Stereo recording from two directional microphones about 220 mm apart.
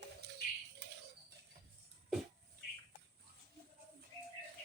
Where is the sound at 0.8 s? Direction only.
50° right (ahead or behind).